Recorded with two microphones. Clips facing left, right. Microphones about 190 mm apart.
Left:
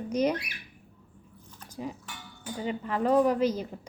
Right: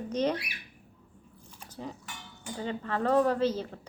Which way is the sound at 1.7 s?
10° left (ahead or behind).